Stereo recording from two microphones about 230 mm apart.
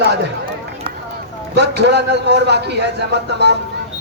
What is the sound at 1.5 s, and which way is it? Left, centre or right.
Speech, right.